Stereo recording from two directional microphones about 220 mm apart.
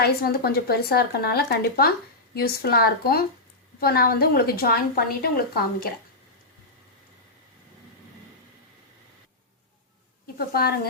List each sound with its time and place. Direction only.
0.0 s speech: 45° left (ahead or behind)
10.3 s a woman's voice: 45° left (ahead or behind)